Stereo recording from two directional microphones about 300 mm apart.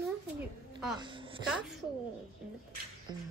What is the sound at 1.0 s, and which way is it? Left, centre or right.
Speech, centre.